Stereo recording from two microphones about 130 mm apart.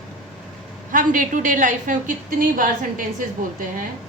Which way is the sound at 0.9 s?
90° right.